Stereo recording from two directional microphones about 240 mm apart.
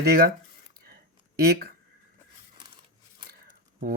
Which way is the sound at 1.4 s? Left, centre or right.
Right.